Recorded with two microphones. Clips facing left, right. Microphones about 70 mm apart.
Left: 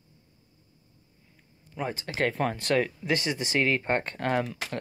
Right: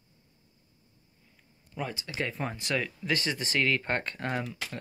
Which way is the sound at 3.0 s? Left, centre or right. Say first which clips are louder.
Left 2 dB; left.